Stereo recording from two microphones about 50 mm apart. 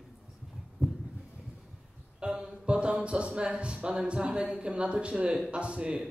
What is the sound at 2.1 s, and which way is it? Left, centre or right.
A man's voice, centre.